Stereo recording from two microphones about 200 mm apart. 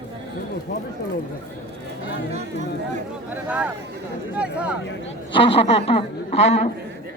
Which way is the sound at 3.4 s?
5° right (ahead or behind).